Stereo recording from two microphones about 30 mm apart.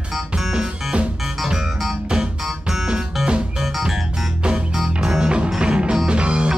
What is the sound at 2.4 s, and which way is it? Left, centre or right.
Music, centre.